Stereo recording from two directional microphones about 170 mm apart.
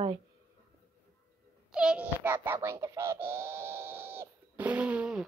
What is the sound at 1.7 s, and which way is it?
A child's voice, 5° right (ahead or behind).